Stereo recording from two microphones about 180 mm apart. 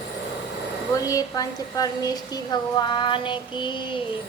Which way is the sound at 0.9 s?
20° left (ahead or behind).